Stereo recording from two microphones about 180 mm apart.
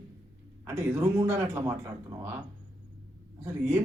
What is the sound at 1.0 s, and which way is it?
Speech, 15° right (ahead or behind).